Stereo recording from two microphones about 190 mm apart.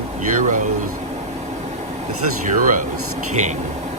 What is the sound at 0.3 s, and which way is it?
Speech, 45° right (ahead or behind).